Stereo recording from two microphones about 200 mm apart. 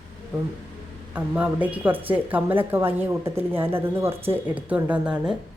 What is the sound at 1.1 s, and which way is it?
A woman's voice, 5° right (ahead or behind).